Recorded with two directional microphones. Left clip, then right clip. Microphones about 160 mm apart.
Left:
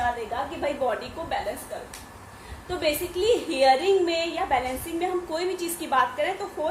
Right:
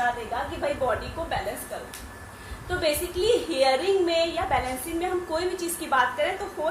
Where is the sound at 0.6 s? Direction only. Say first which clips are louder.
Right 1 dB; 30° left (ahead or behind).